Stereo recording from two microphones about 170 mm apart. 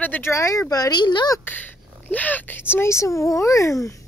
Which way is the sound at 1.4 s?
10° left (ahead or behind).